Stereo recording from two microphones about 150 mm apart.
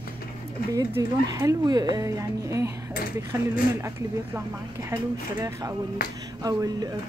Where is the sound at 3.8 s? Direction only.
15° right (ahead or behind).